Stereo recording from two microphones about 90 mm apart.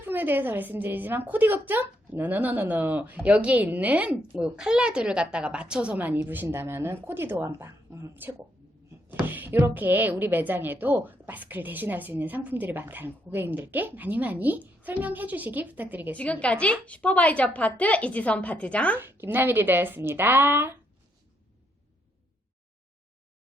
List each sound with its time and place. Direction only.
0.0 s a woman's voice: 25° right (ahead or behind)
8.1 s speech: 20° right (ahead or behind)
16.1 s a woman's voice: 15° left (ahead or behind)
18.9 s speech: 25° right (ahead or behind)